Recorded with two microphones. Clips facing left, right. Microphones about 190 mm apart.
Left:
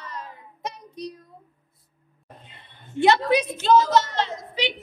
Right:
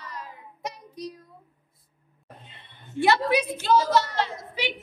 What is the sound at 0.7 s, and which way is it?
Child singing, 20° left (ahead or behind).